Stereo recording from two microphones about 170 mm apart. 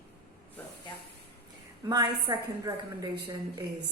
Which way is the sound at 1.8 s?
25° right (ahead or behind).